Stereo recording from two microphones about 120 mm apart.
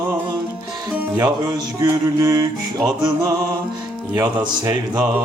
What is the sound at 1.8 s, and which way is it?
Music, 30° right (ahead or behind).